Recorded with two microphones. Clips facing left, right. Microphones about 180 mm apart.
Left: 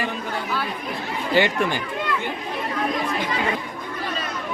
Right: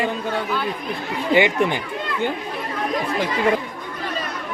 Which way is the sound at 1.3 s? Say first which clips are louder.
Right 3 dB; 20° right (ahead or behind).